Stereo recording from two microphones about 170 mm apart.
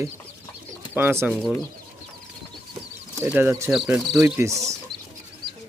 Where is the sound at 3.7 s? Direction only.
Centre (ahead or behind).